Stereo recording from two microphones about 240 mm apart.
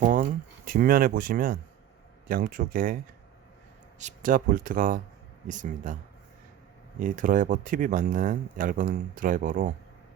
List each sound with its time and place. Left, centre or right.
0.0 s speech: right
7.0 s speech: right